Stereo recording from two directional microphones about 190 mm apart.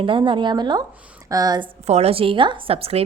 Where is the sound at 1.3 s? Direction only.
20° right (ahead or behind).